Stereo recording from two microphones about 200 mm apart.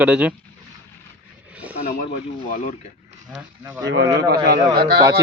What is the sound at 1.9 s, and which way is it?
Speech, 45° left (ahead or behind).